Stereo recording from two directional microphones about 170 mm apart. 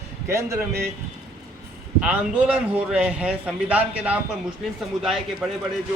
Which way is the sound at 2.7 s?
5° right (ahead or behind).